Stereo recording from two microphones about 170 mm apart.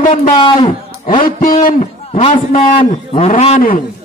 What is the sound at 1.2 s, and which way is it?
Speech, 55° left (ahead or behind).